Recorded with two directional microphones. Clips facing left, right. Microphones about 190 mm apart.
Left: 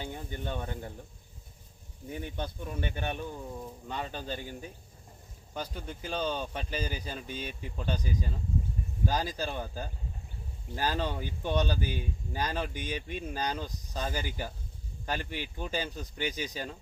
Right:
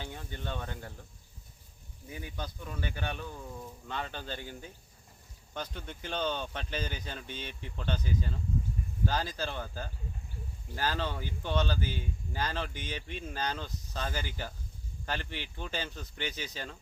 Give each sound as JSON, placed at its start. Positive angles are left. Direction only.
{"t": 0.0, "sound": "a sound", "side_deg": 15}
{"t": 2.0, "sound": "speech", "side_deg": 25}
{"t": 5.5, "sound": "speech", "side_deg": 10}